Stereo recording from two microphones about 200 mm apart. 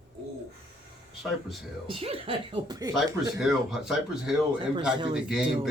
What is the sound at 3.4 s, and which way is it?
Speech, centre (ahead or behind).